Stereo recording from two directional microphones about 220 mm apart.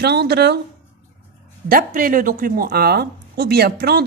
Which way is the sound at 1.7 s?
40° right (ahead or behind).